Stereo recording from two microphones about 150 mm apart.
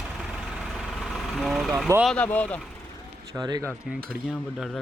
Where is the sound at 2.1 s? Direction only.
10° left (ahead or behind).